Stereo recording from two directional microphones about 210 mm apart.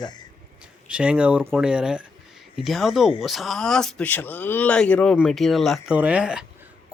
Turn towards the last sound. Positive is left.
turn(degrees=-5)  # may be behind; listen again after turning